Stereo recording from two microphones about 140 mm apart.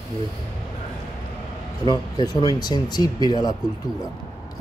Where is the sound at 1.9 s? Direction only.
30° left (ahead or behind).